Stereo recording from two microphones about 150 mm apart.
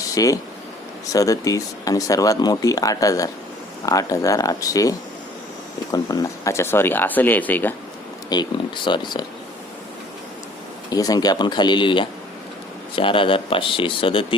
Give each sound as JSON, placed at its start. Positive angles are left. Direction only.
{"t": 0.1, "sound": "speech", "side_deg": 20}
{"t": 8.3, "sound": "speech", "side_deg": 30}
{"t": 10.9, "sound": "speech", "side_deg": 25}